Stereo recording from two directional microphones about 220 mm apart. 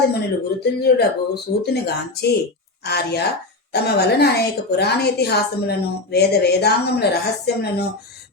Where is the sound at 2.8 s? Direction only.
50° left (ahead or behind).